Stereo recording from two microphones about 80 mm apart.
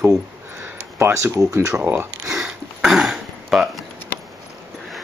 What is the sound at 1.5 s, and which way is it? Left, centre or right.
Speech, right.